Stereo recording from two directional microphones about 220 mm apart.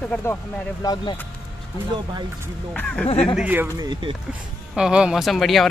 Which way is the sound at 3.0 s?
25° left (ahead or behind).